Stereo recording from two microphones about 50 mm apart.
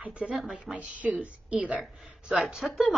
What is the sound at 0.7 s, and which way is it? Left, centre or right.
Speech, right.